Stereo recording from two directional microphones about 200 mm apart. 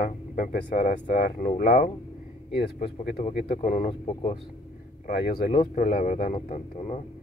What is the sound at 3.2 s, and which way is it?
Speech, 35° left (ahead or behind).